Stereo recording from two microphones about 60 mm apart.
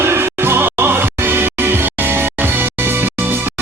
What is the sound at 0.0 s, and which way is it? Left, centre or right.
Music, right.